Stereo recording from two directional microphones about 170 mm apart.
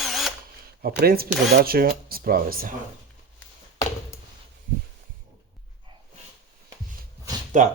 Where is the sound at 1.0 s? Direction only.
65° right (ahead or behind).